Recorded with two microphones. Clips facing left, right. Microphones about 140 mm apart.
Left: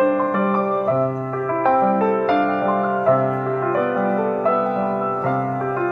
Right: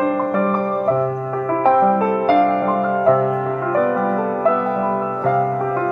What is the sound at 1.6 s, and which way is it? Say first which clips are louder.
Music: right 2 dB; 10° right (ahead or behind).